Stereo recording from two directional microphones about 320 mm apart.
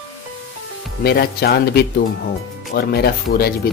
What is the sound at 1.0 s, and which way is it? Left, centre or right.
Speech, left.